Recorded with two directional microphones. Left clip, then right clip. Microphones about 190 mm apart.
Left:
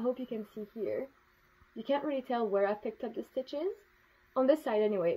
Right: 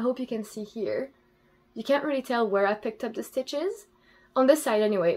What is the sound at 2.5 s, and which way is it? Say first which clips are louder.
Speech: right 6 dB; 15° left (ahead or behind).